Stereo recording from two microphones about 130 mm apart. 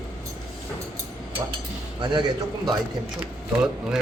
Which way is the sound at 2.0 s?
40° right (ahead or behind).